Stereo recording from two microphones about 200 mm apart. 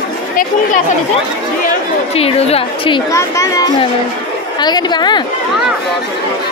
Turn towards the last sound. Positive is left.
turn(degrees=20)  # may be behind; listen again after turning